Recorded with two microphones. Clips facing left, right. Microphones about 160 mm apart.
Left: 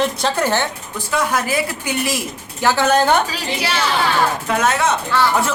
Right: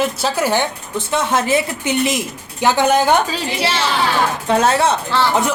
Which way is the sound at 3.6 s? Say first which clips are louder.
Right 1 dB; 30° right (ahead or behind).